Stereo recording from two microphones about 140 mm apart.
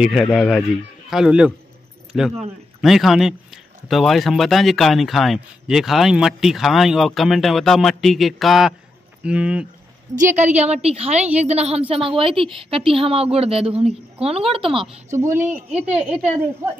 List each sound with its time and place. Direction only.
0.0 s a man's voice: centre (ahead or behind)
10.3 s a woman's voice: 55° right (ahead or behind)
12.2 s speech: 40° right (ahead or behind)
15.1 s a woman's voice: 20° right (ahead or behind)